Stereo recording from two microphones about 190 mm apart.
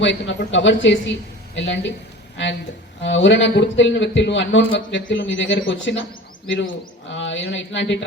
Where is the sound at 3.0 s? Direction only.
75° left (ahead or behind).